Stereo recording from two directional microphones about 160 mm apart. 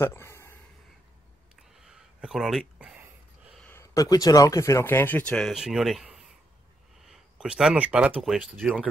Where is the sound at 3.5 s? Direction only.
10° left (ahead or behind).